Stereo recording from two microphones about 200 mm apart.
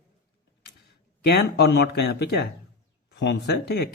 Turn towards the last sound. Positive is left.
turn(degrees=55)  # may be behind; listen again after turning